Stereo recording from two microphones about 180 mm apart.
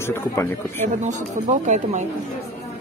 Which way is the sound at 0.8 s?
45° right (ahead or behind).